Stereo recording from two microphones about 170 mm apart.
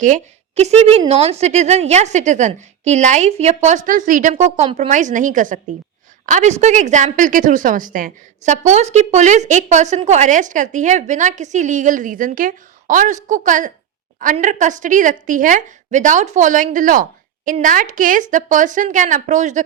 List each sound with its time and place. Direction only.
0.0 s a woman's voice: 45° right (ahead or behind)